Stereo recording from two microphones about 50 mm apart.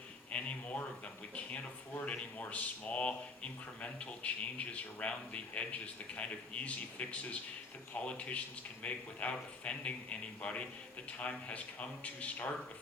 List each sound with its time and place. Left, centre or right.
0.3 s speech: left